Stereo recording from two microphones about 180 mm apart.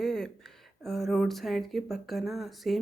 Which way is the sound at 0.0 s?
5° left (ahead or behind).